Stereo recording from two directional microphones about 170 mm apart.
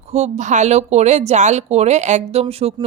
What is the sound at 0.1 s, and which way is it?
Speech, 40° right (ahead or behind).